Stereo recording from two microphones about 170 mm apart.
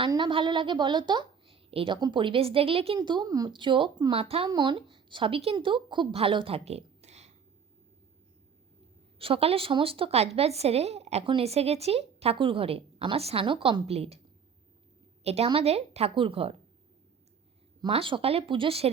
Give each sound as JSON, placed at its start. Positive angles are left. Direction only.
{"t": 0.0, "sound": "a woman's voice", "side_deg": -30}
{"t": 9.1, "sound": "a woman's voice", "side_deg": -35}
{"t": 15.2, "sound": "a woman's voice", "side_deg": -40}
{"t": 17.7, "sound": "a woman's voice", "side_deg": -30}